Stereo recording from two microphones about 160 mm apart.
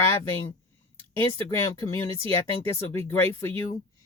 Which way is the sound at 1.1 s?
15° left (ahead or behind).